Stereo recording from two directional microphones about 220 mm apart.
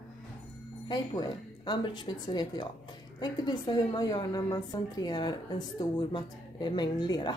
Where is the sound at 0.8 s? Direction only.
20° left (ahead or behind).